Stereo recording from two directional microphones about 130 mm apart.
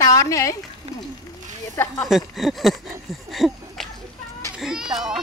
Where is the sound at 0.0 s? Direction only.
25° left (ahead or behind).